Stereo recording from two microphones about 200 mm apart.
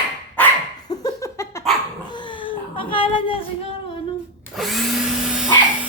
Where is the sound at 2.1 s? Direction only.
25° left (ahead or behind).